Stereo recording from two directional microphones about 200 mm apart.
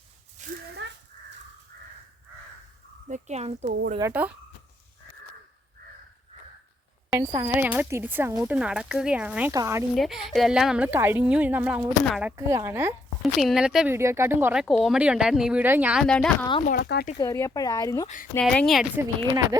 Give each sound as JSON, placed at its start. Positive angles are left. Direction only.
{"t": 0.4, "sound": "a sound", "side_deg": -35}
{"t": 0.8, "sound": "crow", "side_deg": -65}
{"t": 1.7, "sound": "crow", "side_deg": -50}
{"t": 3.1, "sound": "speech", "side_deg": -35}
{"t": 4.1, "sound": "speech", "side_deg": -5}
{"t": 7.1, "sound": "speech", "side_deg": -15}
{"t": 9.9, "sound": "speech", "side_deg": 0}
{"t": 16.8, "sound": "speech", "side_deg": 55}
{"t": 17.2, "sound": "speech", "side_deg": 15}
{"t": 18.3, "sound": "speech", "side_deg": 5}
{"t": 19.0, "sound": "speech", "side_deg": -15}